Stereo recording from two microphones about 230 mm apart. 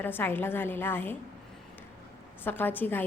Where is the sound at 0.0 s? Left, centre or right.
Centre.